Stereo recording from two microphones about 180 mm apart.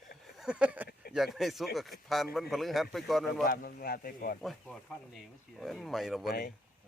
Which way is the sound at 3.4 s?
55° left (ahead or behind).